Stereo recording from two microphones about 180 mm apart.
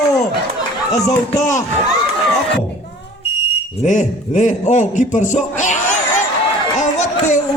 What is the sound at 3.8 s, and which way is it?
A man's voice, 45° left (ahead or behind).